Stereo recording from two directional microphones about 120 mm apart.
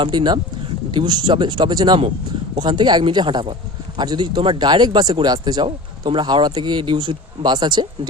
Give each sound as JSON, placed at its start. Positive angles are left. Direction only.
{"t": 0.0, "sound": "speech", "side_deg": -40}